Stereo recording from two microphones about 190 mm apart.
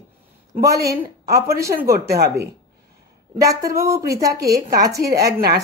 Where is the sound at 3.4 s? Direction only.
15° right (ahead or behind).